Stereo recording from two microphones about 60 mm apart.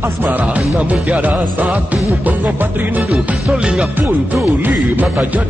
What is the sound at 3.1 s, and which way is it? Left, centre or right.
Music, centre.